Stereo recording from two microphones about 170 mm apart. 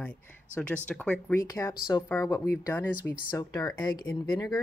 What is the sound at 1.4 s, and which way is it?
Speech, 20° left (ahead or behind).